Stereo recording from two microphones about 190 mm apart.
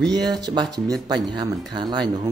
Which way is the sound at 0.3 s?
20° right (ahead or behind).